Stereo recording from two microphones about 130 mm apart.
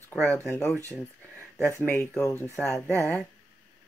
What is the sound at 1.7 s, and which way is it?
Speech, 15° left (ahead or behind).